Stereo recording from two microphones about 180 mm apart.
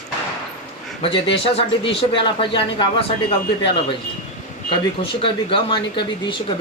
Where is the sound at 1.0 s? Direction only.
30° left (ahead or behind).